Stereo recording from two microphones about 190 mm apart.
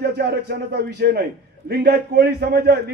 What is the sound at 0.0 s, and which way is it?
A man's voice, 60° right (ahead or behind).